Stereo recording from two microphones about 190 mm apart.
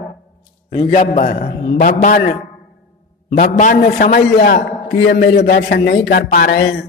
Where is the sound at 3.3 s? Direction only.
50° left (ahead or behind).